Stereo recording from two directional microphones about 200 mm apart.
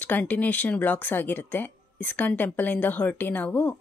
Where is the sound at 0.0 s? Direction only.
10° left (ahead or behind).